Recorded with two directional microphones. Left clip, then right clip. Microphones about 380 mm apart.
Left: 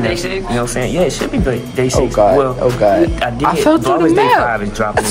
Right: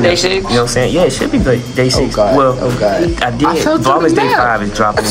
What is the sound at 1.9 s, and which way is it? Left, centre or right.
Speech, left.